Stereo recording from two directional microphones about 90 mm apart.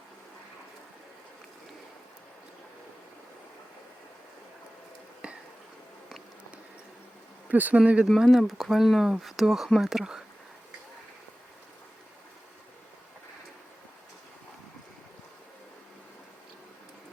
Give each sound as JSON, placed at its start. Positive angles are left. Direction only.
{"t": 5.2, "sound": "a sound", "side_deg": -10}
{"t": 7.4, "sound": "speech", "side_deg": -15}
{"t": 8.0, "sound": "speech", "side_deg": 0}